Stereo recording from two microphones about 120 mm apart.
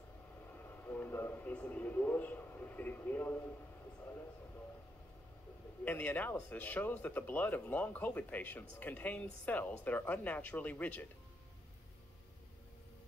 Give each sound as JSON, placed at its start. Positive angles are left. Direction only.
{"t": 0.7, "sound": "a man's voice", "side_deg": 15}
{"t": 5.9, "sound": "speech", "side_deg": 15}